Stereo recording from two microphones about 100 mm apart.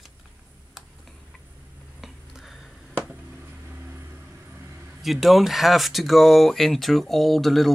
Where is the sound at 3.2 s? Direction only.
20° right (ahead or behind).